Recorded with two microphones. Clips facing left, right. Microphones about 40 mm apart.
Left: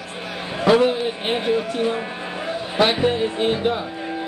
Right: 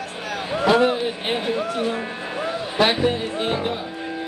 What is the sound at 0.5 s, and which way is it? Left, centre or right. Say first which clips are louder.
Speech: left 1 dB; centre.